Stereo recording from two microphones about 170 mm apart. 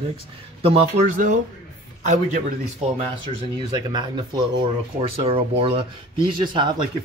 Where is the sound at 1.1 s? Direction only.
50° right (ahead or behind).